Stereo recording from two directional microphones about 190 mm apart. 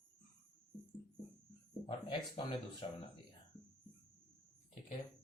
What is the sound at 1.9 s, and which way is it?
A woman's voice, 30° left (ahead or behind).